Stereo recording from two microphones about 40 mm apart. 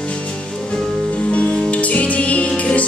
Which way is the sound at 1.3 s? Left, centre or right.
Left.